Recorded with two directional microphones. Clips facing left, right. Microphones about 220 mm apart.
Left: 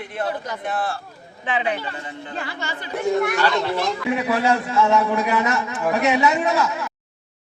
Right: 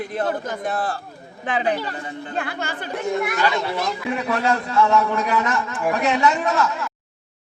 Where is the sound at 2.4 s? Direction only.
55° right (ahead or behind).